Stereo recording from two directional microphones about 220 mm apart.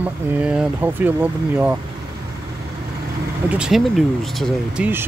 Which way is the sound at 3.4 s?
5° right (ahead or behind).